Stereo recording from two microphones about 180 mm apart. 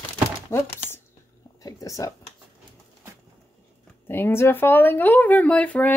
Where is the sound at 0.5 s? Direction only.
15° left (ahead or behind).